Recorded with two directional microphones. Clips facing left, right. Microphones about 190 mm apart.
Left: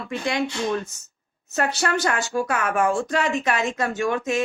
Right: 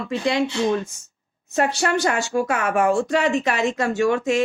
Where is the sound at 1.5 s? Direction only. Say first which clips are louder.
Right 3 dB; 25° right (ahead or behind).